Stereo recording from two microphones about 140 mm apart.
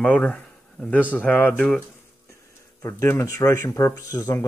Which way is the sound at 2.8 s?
20° left (ahead or behind).